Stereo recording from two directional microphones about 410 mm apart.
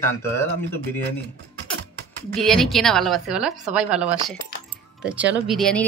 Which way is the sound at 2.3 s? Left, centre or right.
Centre.